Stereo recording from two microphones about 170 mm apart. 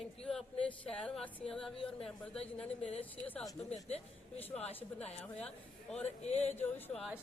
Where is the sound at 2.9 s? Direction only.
35° left (ahead or behind).